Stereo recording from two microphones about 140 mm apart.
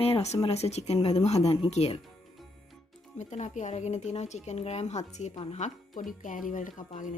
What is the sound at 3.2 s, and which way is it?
Speech, 55° left (ahead or behind).